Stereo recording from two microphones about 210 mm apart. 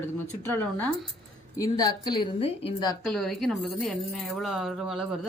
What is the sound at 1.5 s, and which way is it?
A woman's voice, 15° left (ahead or behind).